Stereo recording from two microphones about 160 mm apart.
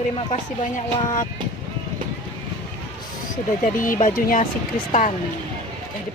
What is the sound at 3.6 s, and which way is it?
Speech, 55° left (ahead or behind).